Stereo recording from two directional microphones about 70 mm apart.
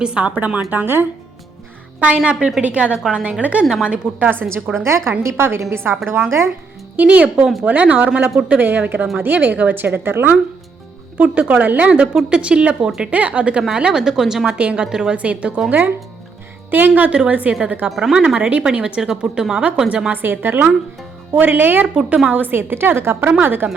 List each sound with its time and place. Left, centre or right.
0.0 s speech: centre
2.0 s a woman's voice: centre
4.3 s a woman's voice: right
6.9 s speech: right
11.2 s a woman's voice: centre
16.7 s speech: right
17.8 s speech: centre
18.3 s a woman's voice: centre
20.2 s a woman's voice: right